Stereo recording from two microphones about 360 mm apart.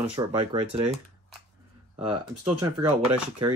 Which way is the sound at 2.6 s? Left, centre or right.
Centre.